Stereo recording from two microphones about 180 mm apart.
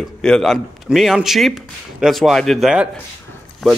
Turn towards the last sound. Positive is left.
turn(degrees=0)  # may be behind; listen again after turning